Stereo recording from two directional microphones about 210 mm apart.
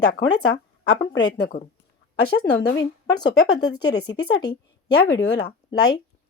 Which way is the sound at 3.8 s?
50° left (ahead or behind).